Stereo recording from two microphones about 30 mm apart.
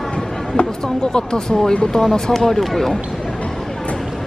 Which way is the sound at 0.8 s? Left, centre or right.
Left.